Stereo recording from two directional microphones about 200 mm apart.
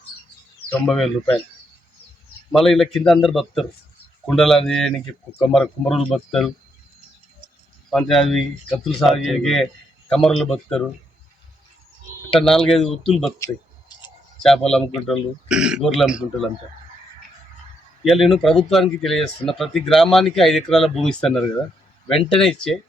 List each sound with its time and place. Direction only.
0.9 s speech: centre (ahead or behind)
2.5 s speech: centre (ahead or behind)
7.9 s speech: centre (ahead or behind)
12.3 s speech: centre (ahead or behind)
13.4 s a sound: 20° left (ahead or behind)
14.4 s speech: centre (ahead or behind)
18.0 s speech: centre (ahead or behind)